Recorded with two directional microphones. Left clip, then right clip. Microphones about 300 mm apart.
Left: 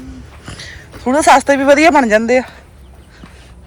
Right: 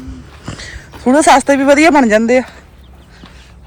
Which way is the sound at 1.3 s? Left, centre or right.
Centre.